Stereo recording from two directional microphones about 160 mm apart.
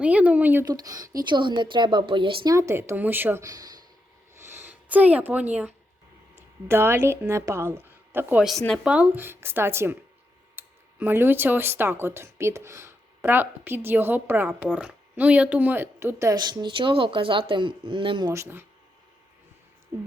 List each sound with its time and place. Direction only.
0.0 s speech: 10° right (ahead or behind)
0.7 s a woman's voice: 25° right (ahead or behind)
4.4 s a sound: 15° right (ahead or behind)
6.7 s speech: 15° right (ahead or behind)
8.4 s speech: centre (ahead or behind); by 18.3 s 30° right (ahead or behind)
18.3 s speech: 15° right (ahead or behind)